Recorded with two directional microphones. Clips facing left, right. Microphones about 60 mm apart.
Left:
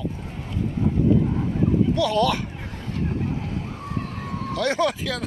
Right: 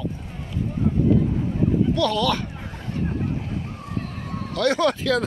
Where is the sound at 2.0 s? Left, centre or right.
Left.